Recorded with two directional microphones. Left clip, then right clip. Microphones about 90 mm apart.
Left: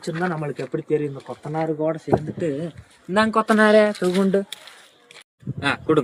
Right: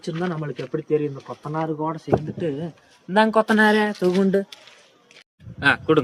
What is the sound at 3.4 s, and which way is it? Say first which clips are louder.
Speech: left 3 dB; 40° right (ahead or behind).